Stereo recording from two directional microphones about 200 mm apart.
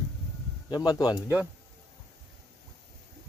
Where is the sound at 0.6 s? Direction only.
20° left (ahead or behind).